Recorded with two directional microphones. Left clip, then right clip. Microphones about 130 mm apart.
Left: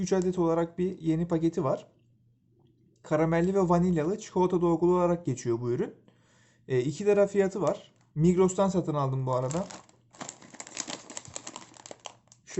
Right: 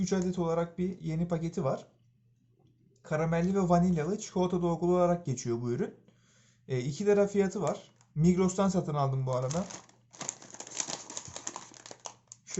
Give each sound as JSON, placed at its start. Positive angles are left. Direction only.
{"t": 0.0, "sound": "speech", "side_deg": 40}
{"t": 3.0, "sound": "speech", "side_deg": 50}